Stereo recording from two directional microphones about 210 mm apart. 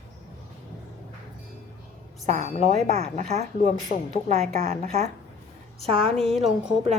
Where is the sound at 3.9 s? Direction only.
40° left (ahead or behind).